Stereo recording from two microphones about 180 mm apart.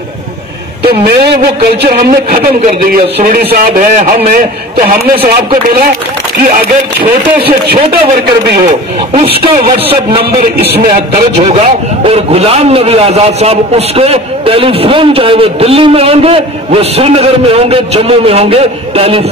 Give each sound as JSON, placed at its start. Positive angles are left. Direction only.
{"t": 0.8, "sound": "speech", "side_deg": -65}
{"t": 3.2, "sound": "a man's voice", "side_deg": -50}
{"t": 6.5, "sound": "speech", "side_deg": -55}
{"t": 10.9, "sound": "a man's voice", "side_deg": -35}